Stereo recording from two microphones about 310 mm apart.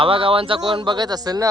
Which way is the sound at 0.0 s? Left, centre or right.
Centre.